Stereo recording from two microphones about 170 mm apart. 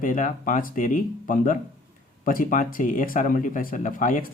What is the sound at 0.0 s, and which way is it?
Speech, 50° left (ahead or behind).